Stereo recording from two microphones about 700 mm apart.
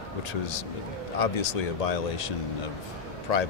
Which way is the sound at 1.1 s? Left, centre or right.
Left.